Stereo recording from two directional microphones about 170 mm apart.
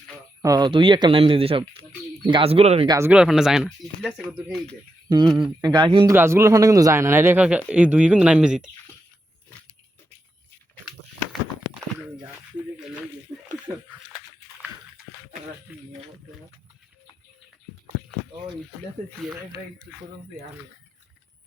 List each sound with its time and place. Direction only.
0.4 s speech: 25° right (ahead or behind)
2.8 s a man's voice: 20° right (ahead or behind)
3.1 s speech: 5° right (ahead or behind)
5.0 s speech: 25° right (ahead or behind)
5.3 s a man's voice: 5° right (ahead or behind)
5.6 s a man's voice: 25° right (ahead or behind)
6.1 s a man's voice: 15° right (ahead or behind)
15.7 s speech: centre (ahead or behind)